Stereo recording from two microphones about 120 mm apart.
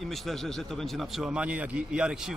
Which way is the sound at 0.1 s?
Centre (ahead or behind).